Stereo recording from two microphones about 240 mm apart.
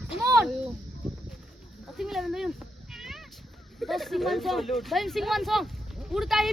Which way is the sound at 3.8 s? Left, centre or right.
Centre.